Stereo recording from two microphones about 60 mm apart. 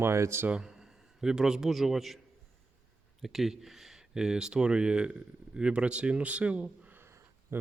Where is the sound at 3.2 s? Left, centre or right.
Centre.